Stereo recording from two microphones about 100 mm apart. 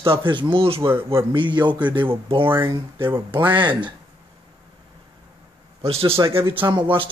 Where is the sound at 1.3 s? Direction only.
50° right (ahead or behind).